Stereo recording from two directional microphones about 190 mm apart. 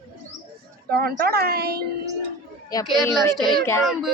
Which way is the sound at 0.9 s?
55° right (ahead or behind).